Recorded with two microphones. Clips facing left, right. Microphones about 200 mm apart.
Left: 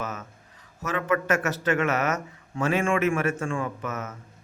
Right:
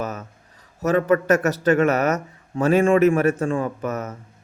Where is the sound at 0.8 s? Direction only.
40° right (ahead or behind).